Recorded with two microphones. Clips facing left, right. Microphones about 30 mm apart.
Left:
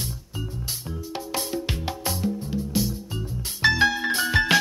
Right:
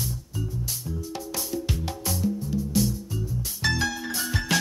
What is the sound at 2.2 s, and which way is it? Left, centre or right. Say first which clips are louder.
Music: right 3 dB; left.